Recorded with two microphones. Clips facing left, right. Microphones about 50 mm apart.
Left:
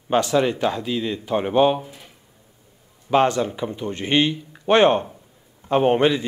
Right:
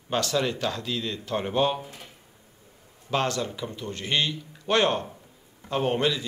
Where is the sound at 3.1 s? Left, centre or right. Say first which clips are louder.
Left 8 dB; left.